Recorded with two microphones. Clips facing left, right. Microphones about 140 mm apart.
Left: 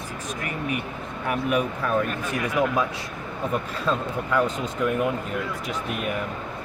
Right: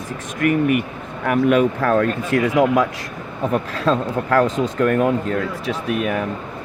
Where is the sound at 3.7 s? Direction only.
90° right.